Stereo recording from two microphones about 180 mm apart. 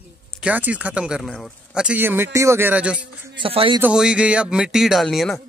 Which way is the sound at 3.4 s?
30° right (ahead or behind).